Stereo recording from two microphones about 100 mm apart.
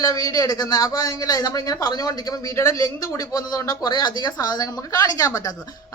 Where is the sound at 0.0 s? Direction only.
35° left (ahead or behind).